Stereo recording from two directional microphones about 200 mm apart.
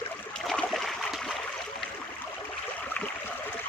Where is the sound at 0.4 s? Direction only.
Centre (ahead or behind).